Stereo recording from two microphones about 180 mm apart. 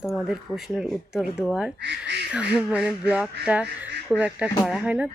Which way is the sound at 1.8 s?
70° right (ahead or behind).